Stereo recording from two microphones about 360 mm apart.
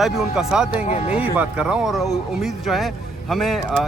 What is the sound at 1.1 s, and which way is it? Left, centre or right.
Speech, centre.